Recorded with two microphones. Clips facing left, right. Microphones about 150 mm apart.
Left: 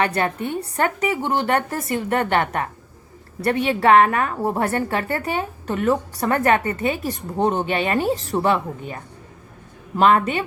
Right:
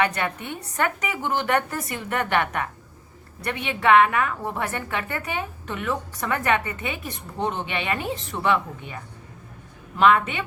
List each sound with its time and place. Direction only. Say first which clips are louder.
0.0 s a woman's voice: left 3 dB; 35° left (ahead or behind)
10.0 s a woman's voice: left 2 dB; 40° left (ahead or behind)